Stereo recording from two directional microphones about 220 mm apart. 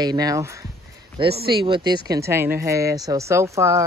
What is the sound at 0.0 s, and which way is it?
Speech, 20° right (ahead or behind).